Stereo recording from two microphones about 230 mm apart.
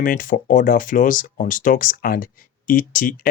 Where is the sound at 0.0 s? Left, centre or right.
Left.